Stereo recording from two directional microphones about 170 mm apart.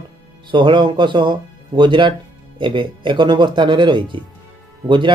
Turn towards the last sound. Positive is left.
turn(degrees=-30)  # may be behind; listen again after turning